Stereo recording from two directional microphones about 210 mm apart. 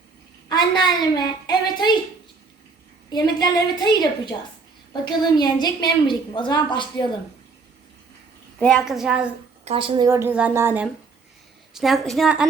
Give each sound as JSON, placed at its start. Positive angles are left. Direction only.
{"t": 0.4, "sound": "a woman's voice", "side_deg": 20}
{"t": 3.1, "sound": "a woman's voice", "side_deg": 20}
{"t": 8.5, "sound": "a woman's voice", "side_deg": 5}
{"t": 9.6, "sound": "a woman's voice", "side_deg": -25}
{"t": 10.1, "sound": "a woman's voice", "side_deg": -10}